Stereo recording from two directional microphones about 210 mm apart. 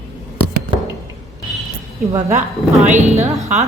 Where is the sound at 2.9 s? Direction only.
35° right (ahead or behind).